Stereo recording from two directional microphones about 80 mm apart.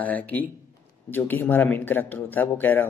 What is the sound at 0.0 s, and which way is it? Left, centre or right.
Speech, left.